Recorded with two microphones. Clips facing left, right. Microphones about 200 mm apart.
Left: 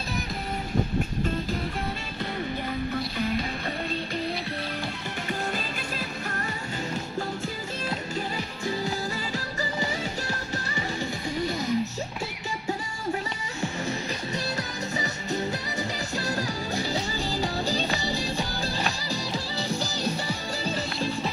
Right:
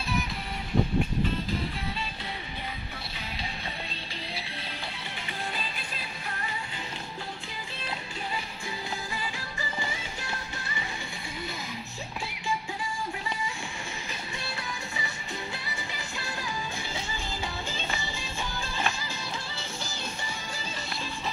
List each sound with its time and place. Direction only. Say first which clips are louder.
3.2 s music: left 13 dB; 50° left (ahead or behind)
5.9 s music: left 6 dB; 45° left (ahead or behind)
9.6 s music: left 6 dB; 40° left (ahead or behind)
16.2 s music: left 6 dB; 40° left (ahead or behind)